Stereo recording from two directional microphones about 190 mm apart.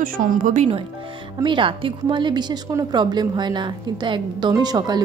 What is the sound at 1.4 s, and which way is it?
A woman's voice, 25° right (ahead or behind).